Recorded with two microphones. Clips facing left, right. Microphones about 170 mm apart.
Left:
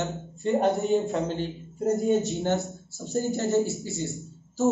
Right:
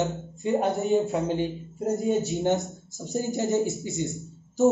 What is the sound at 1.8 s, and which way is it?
Speech, centre (ahead or behind).